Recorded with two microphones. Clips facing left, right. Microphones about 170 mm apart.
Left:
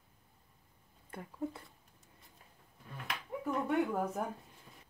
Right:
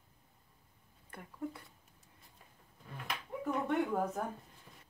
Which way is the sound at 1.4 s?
25° left (ahead or behind).